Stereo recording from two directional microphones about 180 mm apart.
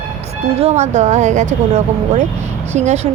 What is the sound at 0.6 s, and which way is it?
Speech, 40° right (ahead or behind).